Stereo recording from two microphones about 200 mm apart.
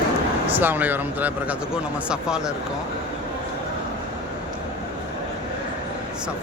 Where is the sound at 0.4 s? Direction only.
10° right (ahead or behind).